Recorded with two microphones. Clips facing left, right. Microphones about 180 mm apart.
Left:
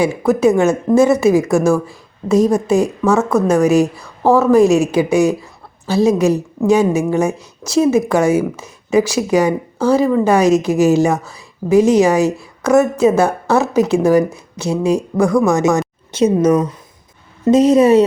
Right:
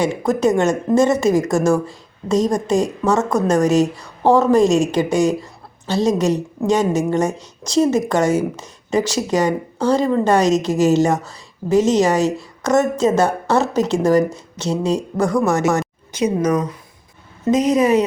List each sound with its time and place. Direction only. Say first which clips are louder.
0.3 s speech: left 4 dB; 10° left (ahead or behind)
16.1 s a woman's voice: left 5 dB; 25° left (ahead or behind)